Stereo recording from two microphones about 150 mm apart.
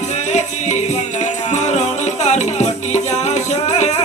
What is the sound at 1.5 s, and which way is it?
Music, 50° left (ahead or behind).